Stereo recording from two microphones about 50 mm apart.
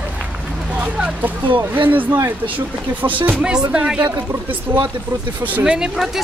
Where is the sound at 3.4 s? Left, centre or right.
Centre.